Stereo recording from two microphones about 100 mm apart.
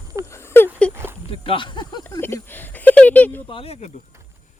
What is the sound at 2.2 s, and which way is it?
Speech, 25° left (ahead or behind).